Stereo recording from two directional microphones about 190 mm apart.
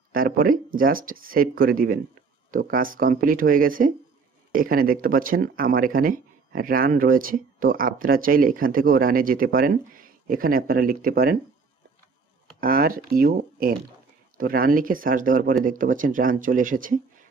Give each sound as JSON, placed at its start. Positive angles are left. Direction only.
{"t": 0.1, "sound": "speech", "side_deg": -50}
{"t": 12.5, "sound": "speech", "side_deg": -50}